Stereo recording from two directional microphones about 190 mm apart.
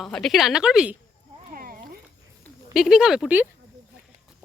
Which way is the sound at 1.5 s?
50° right (ahead or behind).